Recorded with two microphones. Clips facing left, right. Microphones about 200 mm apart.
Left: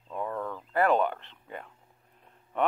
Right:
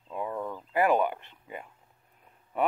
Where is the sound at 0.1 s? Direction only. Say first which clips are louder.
Even; 15° right (ahead or behind).